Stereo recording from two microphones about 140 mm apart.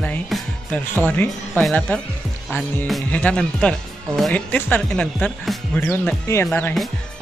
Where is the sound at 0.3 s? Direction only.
10° left (ahead or behind).